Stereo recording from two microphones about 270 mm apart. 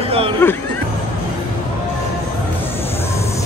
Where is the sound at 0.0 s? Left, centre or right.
Right.